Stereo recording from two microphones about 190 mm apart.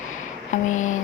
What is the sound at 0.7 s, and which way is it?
Speech, 40° left (ahead or behind).